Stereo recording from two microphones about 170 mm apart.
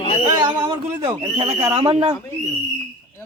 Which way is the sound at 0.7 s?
15° right (ahead or behind).